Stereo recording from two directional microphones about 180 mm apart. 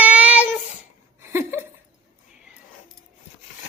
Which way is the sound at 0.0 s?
10° right (ahead or behind).